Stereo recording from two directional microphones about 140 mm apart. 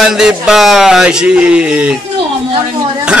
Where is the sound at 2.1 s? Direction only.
40° right (ahead or behind).